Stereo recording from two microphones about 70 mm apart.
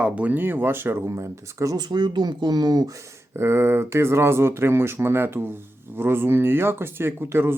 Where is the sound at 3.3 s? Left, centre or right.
Right.